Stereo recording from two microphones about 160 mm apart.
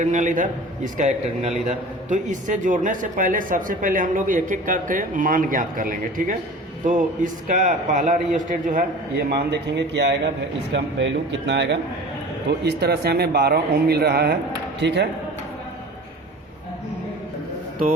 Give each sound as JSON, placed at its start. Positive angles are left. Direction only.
{"t": 0.0, "sound": "a man's voice", "side_deg": -50}
{"t": 11.4, "sound": "a man's voice", "side_deg": -90}